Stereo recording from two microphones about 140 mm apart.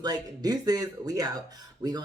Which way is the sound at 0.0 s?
30° right (ahead or behind).